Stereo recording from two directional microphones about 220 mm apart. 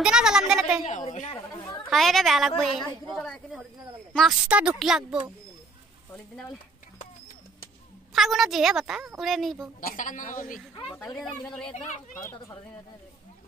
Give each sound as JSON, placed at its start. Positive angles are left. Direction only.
{"t": 0.0, "sound": "a sound", "side_deg": -5}
{"t": 1.1, "sound": "speech", "side_deg": 30}
{"t": 1.9, "sound": "a woman's voice", "side_deg": 0}
{"t": 8.1, "sound": "a woman's voice", "side_deg": 0}
{"t": 9.8, "sound": "a man's voice", "side_deg": 35}
{"t": 11.4, "sound": "a woman's voice", "side_deg": 0}